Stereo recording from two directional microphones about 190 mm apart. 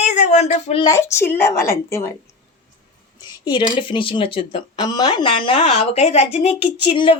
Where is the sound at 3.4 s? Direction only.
25° left (ahead or behind).